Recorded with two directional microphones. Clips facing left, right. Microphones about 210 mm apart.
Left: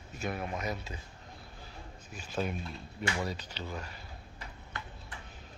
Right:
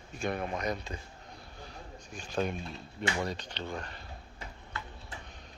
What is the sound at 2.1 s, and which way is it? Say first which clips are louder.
Speech: right 2 dB; 5° left (ahead or behind).